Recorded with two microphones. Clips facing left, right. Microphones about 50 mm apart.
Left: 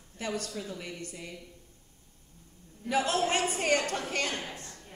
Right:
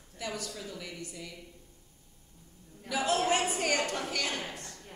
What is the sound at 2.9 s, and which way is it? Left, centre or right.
A woman's voice, left.